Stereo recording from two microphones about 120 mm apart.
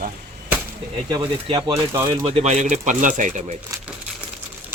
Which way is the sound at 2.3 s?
70° right (ahead or behind).